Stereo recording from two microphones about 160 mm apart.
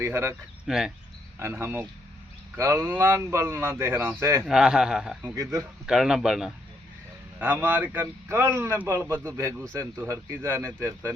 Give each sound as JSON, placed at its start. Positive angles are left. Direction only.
{"t": 0.0, "sound": "a man's voice", "side_deg": -15}
{"t": 0.7, "sound": "a man's voice", "side_deg": -5}
{"t": 1.4, "sound": "a man's voice", "side_deg": -15}
{"t": 4.4, "sound": "a man's voice", "side_deg": -5}
{"t": 5.3, "sound": "speech", "side_deg": -20}
{"t": 5.8, "sound": "a man's voice", "side_deg": -5}